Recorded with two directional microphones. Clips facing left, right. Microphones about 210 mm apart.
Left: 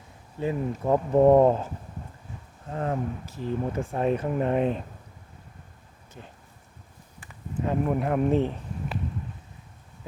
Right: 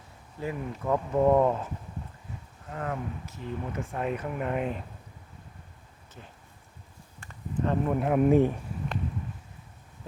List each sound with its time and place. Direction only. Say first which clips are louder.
0.3 s speech: left 6 dB; 25° left (ahead or behind)
2.6 s speech: left 5 dB; 30° left (ahead or behind)
6.2 s speech: left 3 dB; 20° left (ahead or behind)
7.2 s speech: right 1 dB; 10° left (ahead or behind); by 8.5 s 10° right (ahead or behind)